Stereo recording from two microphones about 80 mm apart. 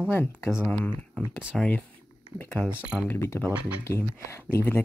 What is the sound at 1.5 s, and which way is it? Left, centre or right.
Speech, centre.